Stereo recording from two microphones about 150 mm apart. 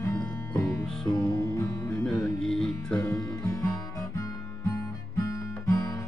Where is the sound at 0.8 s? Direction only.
5° left (ahead or behind).